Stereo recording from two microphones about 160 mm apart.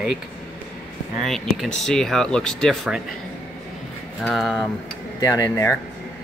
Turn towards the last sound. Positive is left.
turn(degrees=15)  # may be behind; listen again after turning